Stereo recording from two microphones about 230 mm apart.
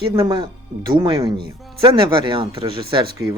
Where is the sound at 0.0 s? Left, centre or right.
Right.